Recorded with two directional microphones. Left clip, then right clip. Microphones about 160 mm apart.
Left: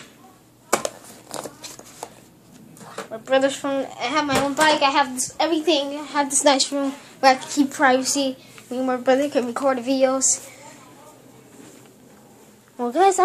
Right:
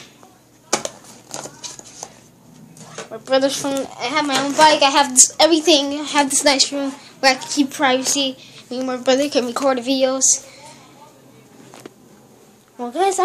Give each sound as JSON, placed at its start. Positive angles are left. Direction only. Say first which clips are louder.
{"t": 0.7, "sound": "a sound", "louder": "even", "side_deg": 30}
{"t": 3.3, "sound": "a woman's voice", "louder": "right 2 dB", "side_deg": -15}
{"t": 4.0, "sound": "a woman's voice", "louder": "right 3 dB", "side_deg": -5}
{"t": 4.6, "sound": "a child's voice", "louder": "right 6 dB", "side_deg": -30}
{"t": 5.1, "sound": "a woman's voice", "louder": "right 9 dB", "side_deg": -45}
{"t": 5.8, "sound": "a child's voice", "louder": "right 5 dB", "side_deg": -30}
{"t": 6.4, "sound": "a woman's voice", "louder": "right 2 dB", "side_deg": 0}
{"t": 9.0, "sound": "a woman's voice", "louder": "right 3 dB", "side_deg": -10}
{"t": 12.7, "sound": "a woman's voice", "louder": "left 2 dB", "side_deg": 20}